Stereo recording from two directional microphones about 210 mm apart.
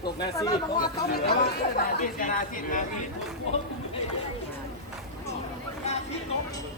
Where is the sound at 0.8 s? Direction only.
45° left (ahead or behind).